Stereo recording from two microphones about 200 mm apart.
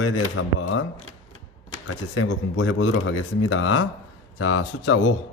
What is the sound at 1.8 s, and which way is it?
A man's voice, 80° left.